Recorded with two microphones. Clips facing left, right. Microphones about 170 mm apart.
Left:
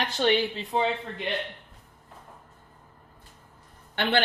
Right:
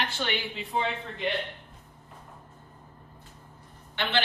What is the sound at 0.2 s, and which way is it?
Speech, 35° left (ahead or behind).